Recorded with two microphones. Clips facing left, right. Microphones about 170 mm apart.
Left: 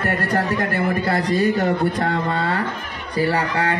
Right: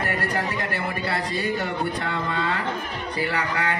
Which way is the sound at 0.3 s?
50° left (ahead or behind).